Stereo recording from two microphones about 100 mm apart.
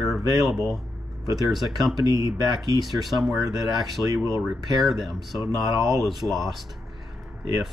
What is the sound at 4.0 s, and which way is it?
Speech, 20° left (ahead or behind).